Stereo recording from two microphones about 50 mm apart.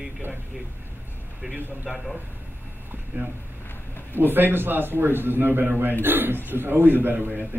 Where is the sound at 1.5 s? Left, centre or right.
Right.